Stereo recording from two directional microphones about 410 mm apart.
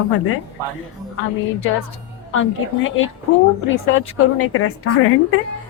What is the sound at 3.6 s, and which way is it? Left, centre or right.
A woman's voice, left.